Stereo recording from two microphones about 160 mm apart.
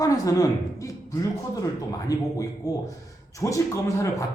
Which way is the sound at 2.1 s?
20° left (ahead or behind).